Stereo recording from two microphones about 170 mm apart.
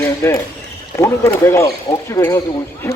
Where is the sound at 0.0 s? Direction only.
15° left (ahead or behind).